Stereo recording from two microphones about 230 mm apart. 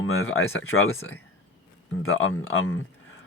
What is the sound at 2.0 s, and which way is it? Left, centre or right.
Speech, left.